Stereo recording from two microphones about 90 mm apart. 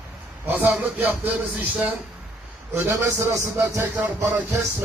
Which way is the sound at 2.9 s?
35° right (ahead or behind).